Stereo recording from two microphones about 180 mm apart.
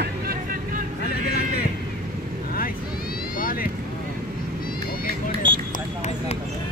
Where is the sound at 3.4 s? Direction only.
50° left (ahead or behind).